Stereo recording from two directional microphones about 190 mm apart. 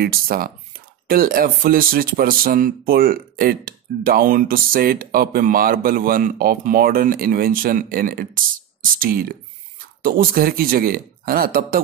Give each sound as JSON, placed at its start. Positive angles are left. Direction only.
{"t": 0.0, "sound": "speech", "side_deg": -50}